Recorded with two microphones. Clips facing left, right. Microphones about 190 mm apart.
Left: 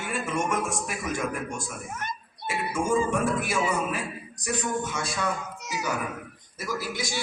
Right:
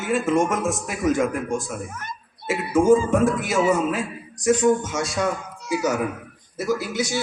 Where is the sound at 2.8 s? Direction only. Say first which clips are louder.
Right 7 dB; 90° right.